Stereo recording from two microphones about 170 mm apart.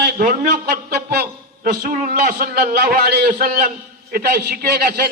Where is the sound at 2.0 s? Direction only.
55° right (ahead or behind).